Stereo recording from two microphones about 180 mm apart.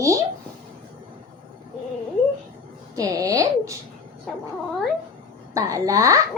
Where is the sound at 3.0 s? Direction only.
20° right (ahead or behind).